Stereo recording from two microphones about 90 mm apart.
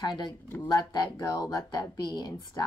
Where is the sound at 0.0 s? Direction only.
55° left (ahead or behind).